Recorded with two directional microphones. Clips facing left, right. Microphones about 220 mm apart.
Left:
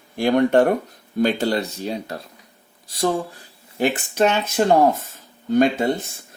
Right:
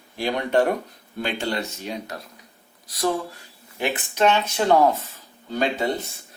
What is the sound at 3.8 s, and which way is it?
Speech, 45° left (ahead or behind).